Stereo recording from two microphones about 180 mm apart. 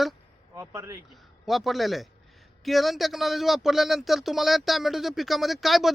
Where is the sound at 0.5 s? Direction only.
15° right (ahead or behind).